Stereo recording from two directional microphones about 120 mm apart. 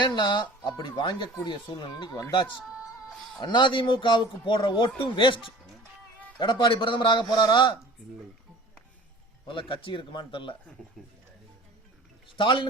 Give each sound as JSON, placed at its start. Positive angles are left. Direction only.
{"t": 0.0, "sound": "speech", "side_deg": 40}
{"t": 2.6, "sound": "music", "side_deg": -5}
{"t": 3.4, "sound": "speech", "side_deg": 40}
{"t": 6.4, "sound": "speech", "side_deg": 40}
{"t": 9.5, "sound": "speech", "side_deg": 45}
{"t": 11.0, "sound": "speech", "side_deg": 5}
{"t": 12.4, "sound": "speech", "side_deg": 40}